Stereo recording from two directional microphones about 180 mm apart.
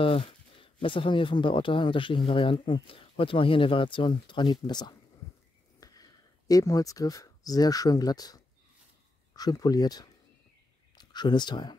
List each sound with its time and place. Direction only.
0.0 s speech: 30° left (ahead or behind)